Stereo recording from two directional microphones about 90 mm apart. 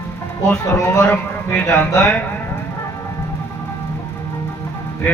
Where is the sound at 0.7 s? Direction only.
35° left (ahead or behind).